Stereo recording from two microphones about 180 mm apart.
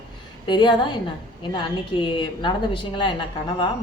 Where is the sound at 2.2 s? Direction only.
25° left (ahead or behind).